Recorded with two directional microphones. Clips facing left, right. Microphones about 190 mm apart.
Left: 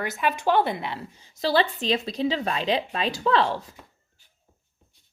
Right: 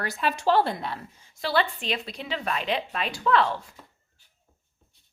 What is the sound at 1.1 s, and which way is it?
Speech, 35° left (ahead or behind).